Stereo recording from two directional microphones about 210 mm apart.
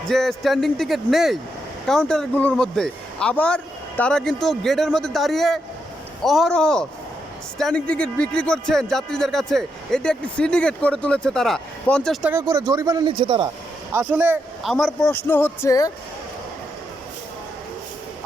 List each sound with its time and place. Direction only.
0.1 s speech: centre (ahead or behind)
12.3 s a man's voice: 15° right (ahead or behind)
13.9 s speech: 5° right (ahead or behind); by 15.9 s 15° left (ahead or behind)